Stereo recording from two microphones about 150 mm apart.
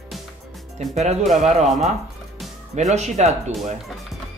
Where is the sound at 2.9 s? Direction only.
50° right (ahead or behind).